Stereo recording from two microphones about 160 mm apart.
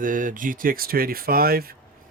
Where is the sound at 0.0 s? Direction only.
55° right (ahead or behind).